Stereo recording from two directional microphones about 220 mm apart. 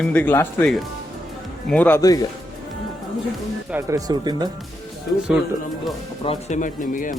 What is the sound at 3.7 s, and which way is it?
Speech, 15° right (ahead or behind).